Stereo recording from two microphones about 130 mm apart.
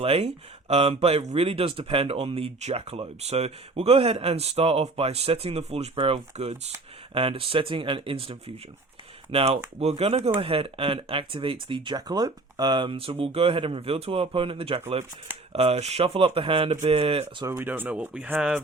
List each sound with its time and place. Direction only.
0.0 s speech: 50° right (ahead or behind)
17.6 s speech: 15° right (ahead or behind)